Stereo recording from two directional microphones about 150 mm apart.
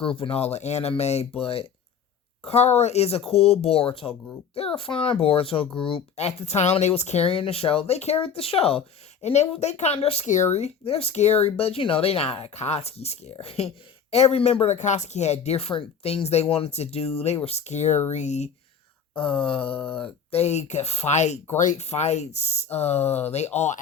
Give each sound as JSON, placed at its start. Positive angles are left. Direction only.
{"t": 0.0, "sound": "a child's voice", "side_deg": 35}
{"t": 19.1, "sound": "a child's voice", "side_deg": 35}
{"t": 19.7, "sound": "speech", "side_deg": 10}
{"t": 20.0, "sound": "speech", "side_deg": 45}